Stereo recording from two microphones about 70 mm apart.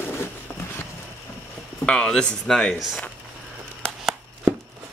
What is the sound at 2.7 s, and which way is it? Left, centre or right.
Speech, centre.